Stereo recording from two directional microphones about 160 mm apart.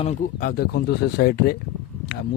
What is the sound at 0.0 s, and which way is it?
Speech, 50° left (ahead or behind).